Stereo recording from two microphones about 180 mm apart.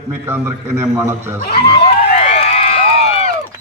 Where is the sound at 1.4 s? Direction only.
60° left (ahead or behind).